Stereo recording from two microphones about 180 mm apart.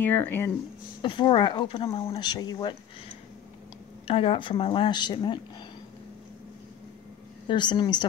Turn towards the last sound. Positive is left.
turn(degrees=25)  # may be behind; listen again after turning